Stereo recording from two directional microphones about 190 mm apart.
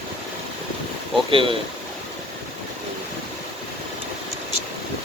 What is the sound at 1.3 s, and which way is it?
Speech, 25° right (ahead or behind).